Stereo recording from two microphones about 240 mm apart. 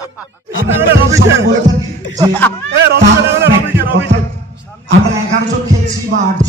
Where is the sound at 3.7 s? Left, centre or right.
Right.